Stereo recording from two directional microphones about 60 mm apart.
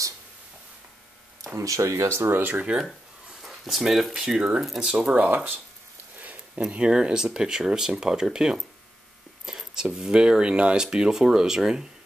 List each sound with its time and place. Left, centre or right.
1.6 s speech: right
3.4 s speech: centre
4.9 s speech: right
9.5 s a sound: centre
9.9 s speech: centre